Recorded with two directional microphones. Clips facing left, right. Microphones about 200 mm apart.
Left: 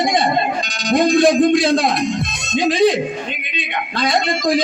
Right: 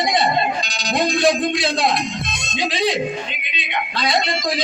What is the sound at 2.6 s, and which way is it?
Music, 50° left (ahead or behind).